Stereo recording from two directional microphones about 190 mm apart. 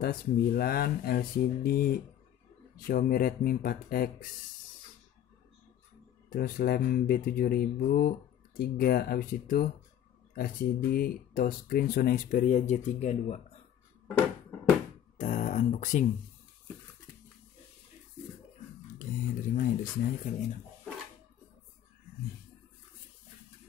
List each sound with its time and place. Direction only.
0.0 s speech: 50° left (ahead or behind)
6.3 s speech: 50° left (ahead or behind)
15.1 s a sound: 40° left (ahead or behind)
18.9 s speech: 45° left (ahead or behind)